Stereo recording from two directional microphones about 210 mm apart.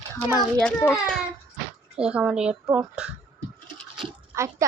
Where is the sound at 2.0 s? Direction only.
5° right (ahead or behind).